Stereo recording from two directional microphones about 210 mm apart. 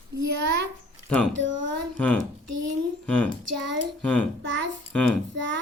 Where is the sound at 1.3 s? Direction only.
60° right (ahead or behind).